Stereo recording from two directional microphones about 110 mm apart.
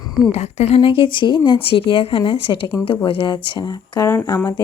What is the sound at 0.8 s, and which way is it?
A woman's voice, 55° left (ahead or behind).